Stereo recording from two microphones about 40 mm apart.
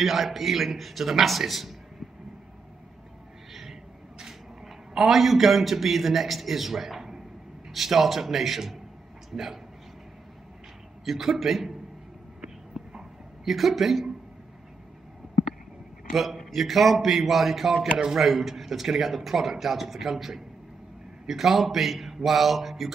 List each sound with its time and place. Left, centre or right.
0.0 s a man's voice: centre
4.9 s a man's voice: centre
11.1 s a man's voice: centre
13.5 s a man's voice: centre
16.1 s a man's voice: centre